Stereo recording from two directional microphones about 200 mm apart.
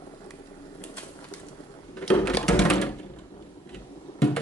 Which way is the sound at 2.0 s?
5° left (ahead or behind).